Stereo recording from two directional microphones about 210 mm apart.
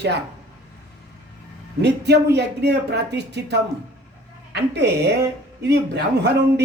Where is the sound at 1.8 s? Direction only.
55° right (ahead or behind).